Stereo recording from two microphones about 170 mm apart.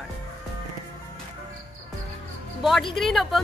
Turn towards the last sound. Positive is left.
turn(degrees=0)  # may be behind; listen again after turning